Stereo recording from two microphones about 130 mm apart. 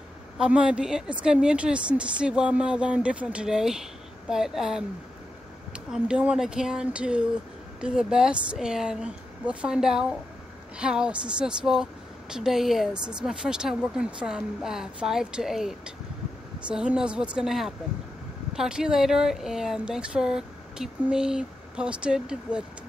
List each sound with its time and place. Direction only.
0.4 s a woman's voice: 10° right (ahead or behind)
5.9 s a woman's voice: 5° right (ahead or behind)